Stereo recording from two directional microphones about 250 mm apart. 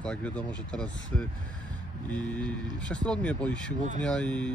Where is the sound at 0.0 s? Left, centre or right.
Centre.